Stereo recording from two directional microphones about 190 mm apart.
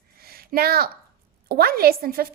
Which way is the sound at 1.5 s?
55° right (ahead or behind).